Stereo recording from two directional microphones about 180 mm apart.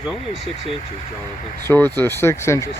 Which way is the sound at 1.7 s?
10° left (ahead or behind).